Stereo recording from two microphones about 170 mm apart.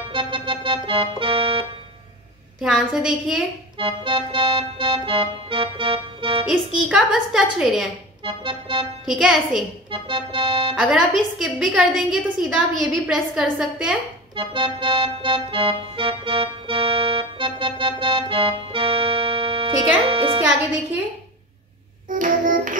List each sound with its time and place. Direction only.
0.1 s organ: 30° right (ahead or behind)
2.6 s a woman's voice: 5° right (ahead or behind)
3.7 s organ: 30° right (ahead or behind)
6.9 s a woman's voice: centre (ahead or behind)
8.2 s speech: 30° right (ahead or behind)
9.0 s a woman's voice: centre (ahead or behind)
9.8 s speech: 30° right (ahead or behind)
10.8 s a woman's voice: centre (ahead or behind)
14.3 s organ: 30° right (ahead or behind)
22.2 s child singing: 50° right (ahead or behind)